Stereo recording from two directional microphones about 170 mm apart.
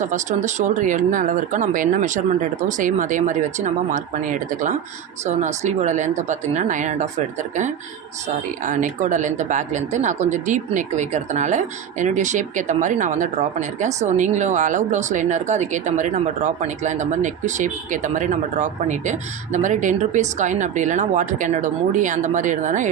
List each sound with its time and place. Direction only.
0.0 s speech: 45° right (ahead or behind)
8.6 s speech: 50° right (ahead or behind)